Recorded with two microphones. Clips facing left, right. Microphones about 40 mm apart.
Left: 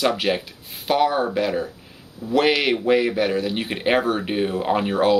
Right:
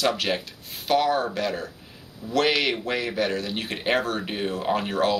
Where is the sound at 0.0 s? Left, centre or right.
Centre.